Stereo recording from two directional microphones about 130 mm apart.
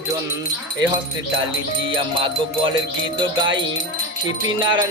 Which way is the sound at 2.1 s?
40° right (ahead or behind).